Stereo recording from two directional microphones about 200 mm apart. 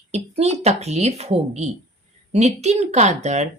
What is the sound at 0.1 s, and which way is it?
A woman's voice, 30° right (ahead or behind).